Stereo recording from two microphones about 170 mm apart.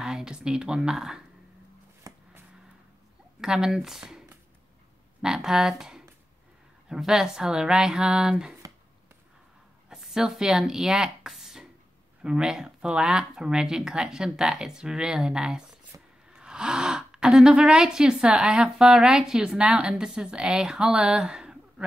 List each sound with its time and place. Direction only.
0.0 s a woman's voice: 5° right (ahead or behind)
2.1 s a sound: 20° right (ahead or behind)
3.3 s speech: 5° right (ahead or behind)
5.2 s speech: 5° right (ahead or behind)
9.8 s speech: 5° right (ahead or behind)